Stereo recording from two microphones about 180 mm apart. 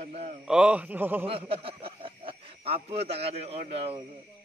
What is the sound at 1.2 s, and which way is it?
Speech, 30° right (ahead or behind).